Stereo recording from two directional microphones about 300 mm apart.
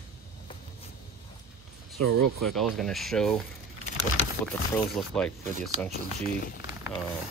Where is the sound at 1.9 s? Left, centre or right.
Right.